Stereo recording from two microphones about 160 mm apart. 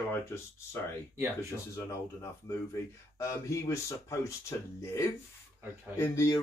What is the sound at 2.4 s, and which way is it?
Speech, 20° left (ahead or behind).